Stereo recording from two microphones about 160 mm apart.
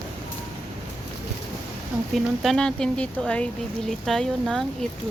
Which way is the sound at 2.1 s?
Centre (ahead or behind).